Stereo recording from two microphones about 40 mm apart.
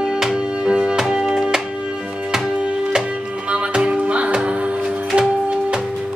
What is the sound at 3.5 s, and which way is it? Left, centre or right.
Music, right.